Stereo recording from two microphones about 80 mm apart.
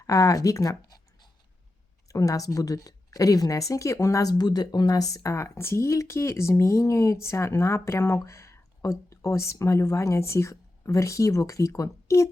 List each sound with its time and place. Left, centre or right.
0.0 s speech: left